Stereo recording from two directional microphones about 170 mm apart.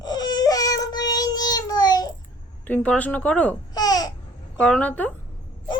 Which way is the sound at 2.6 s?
10° left (ahead or behind).